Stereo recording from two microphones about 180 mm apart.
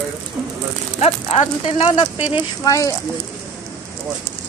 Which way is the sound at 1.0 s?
35° left (ahead or behind).